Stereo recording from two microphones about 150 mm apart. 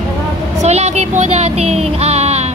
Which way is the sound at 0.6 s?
45° right (ahead or behind).